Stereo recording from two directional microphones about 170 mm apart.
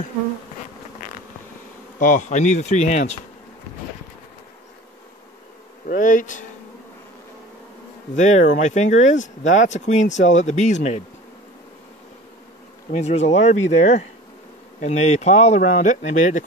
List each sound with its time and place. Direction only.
2.0 s speech: 50° left (ahead or behind)
5.9 s speech: 50° left (ahead or behind)
8.2 s speech: 45° left (ahead or behind)
12.9 s speech: 40° left (ahead or behind)